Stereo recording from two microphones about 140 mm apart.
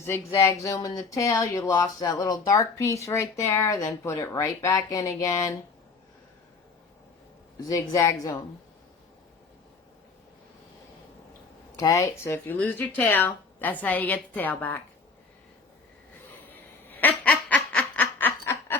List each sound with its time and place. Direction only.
0.3 s speech: 20° left (ahead or behind)
7.7 s speech: 20° left (ahead or behind)
11.8 s speech: 25° left (ahead or behind)
16.3 s a sound: 15° left (ahead or behind)